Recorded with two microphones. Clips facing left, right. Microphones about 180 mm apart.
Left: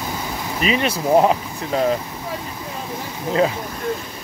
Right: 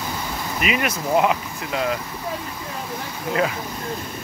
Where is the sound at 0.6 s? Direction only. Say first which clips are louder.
Left 4 dB; 30° left (ahead or behind).